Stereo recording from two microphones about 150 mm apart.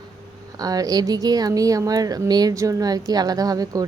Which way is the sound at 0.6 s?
25° right (ahead or behind).